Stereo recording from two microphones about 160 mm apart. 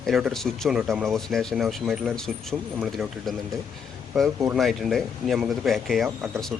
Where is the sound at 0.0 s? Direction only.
Centre (ahead or behind).